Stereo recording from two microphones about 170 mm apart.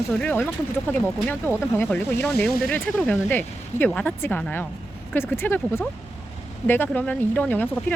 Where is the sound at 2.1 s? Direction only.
65° left (ahead or behind).